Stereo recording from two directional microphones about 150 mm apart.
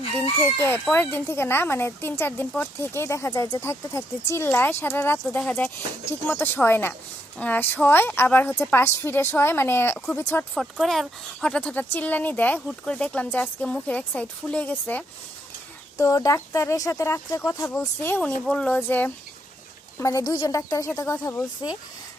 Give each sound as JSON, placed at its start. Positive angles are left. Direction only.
{"t": 0.4, "sound": "speech", "side_deg": 15}
{"t": 10.5, "sound": "speech", "side_deg": 0}
{"t": 16.0, "sound": "speech", "side_deg": 20}